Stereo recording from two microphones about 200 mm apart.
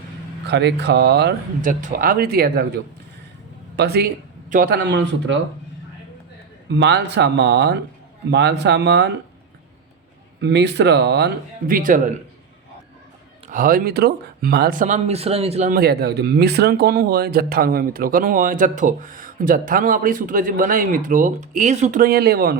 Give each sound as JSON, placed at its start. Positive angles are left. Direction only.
{"t": 0.4, "sound": "speech", "side_deg": -55}
{"t": 1.8, "sound": "speech", "side_deg": -45}
{"t": 3.8, "sound": "speech", "side_deg": -55}
{"t": 6.7, "sound": "speech", "side_deg": -60}
{"t": 10.4, "sound": "speech", "side_deg": -60}
{"t": 11.7, "sound": "speech", "side_deg": -40}
{"t": 13.5, "sound": "speech", "side_deg": -45}
{"t": 15.7, "sound": "speech", "side_deg": -50}